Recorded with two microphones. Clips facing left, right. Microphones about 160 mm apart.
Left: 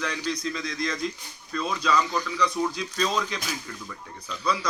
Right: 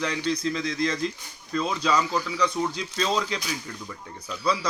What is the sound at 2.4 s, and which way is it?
Speech, 25° right (ahead or behind).